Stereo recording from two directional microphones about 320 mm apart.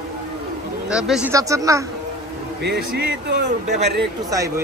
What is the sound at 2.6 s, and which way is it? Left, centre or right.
Speech, right.